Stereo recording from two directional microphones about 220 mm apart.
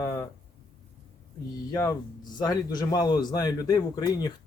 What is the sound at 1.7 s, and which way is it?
Speech, 15° left (ahead or behind).